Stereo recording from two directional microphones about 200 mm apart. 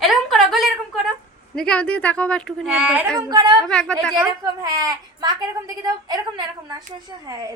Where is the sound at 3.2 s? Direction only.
20° right (ahead or behind).